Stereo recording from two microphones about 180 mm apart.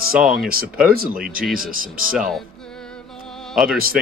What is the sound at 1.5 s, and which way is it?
Speech, 50° right (ahead or behind).